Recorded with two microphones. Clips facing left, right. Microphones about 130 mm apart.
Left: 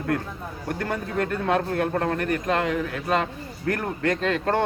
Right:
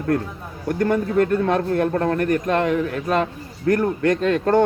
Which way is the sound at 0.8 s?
45° right (ahead or behind).